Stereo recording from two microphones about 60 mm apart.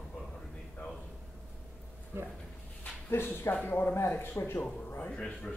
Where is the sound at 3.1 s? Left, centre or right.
Left.